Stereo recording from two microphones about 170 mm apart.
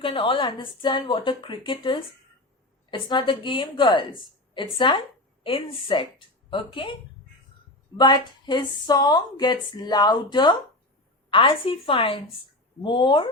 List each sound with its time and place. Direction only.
0.0 s a woman's voice: 30° left (ahead or behind)
7.9 s a woman's voice: 25° left (ahead or behind)